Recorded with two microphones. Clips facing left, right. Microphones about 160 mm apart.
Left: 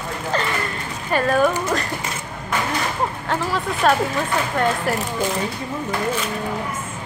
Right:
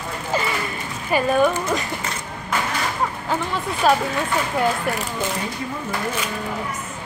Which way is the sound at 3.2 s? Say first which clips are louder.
Left 1 dB; centre (ahead or behind).